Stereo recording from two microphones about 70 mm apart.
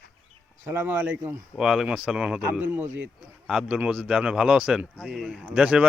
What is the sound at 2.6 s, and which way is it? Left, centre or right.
Speech, right.